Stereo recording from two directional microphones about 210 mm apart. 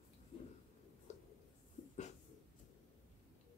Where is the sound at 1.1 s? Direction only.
30° left (ahead or behind).